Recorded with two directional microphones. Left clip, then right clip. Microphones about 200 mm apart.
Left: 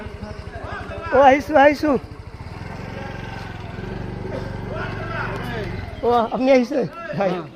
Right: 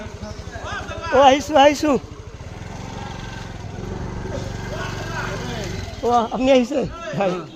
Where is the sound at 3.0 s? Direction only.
25° left (ahead or behind).